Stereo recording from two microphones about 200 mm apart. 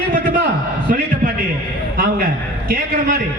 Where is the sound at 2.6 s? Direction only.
45° right (ahead or behind).